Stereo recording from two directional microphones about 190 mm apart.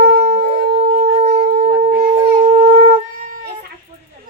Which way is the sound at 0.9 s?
45° right (ahead or behind).